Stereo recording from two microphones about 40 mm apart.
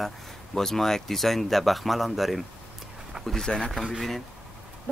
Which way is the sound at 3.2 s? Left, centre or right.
Right.